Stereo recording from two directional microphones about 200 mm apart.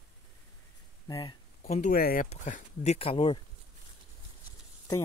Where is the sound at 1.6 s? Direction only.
35° left (ahead or behind).